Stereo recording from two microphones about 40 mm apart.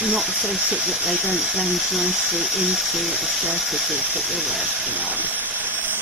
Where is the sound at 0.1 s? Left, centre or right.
Centre.